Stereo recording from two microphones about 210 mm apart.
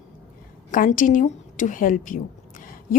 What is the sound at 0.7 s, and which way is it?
A woman's voice, 40° left (ahead or behind).